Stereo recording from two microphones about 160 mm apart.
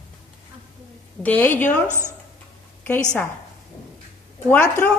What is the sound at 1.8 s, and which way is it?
Speech, 15° right (ahead or behind).